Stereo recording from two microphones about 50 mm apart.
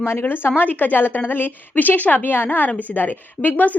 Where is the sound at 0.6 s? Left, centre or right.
Left.